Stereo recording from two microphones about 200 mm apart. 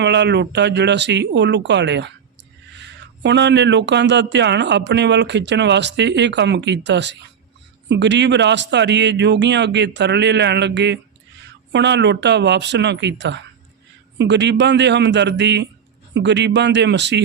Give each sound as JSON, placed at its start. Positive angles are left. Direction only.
{"t": 0.0, "sound": "speech", "side_deg": -60}